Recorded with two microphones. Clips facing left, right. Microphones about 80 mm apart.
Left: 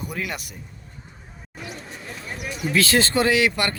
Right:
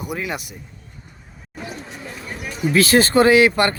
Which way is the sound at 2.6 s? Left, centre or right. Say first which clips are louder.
Right 5 dB; right.